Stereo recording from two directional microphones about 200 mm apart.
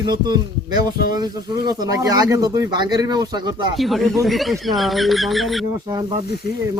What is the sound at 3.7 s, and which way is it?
Speech, centre (ahead or behind).